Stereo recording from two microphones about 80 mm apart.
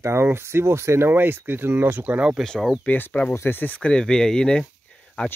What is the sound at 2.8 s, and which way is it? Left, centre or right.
Speech, left.